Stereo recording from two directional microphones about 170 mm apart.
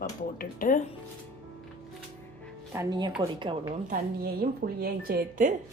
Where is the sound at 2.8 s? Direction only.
25° right (ahead or behind).